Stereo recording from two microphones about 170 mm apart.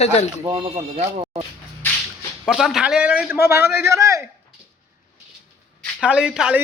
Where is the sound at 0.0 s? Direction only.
40° left (ahead or behind).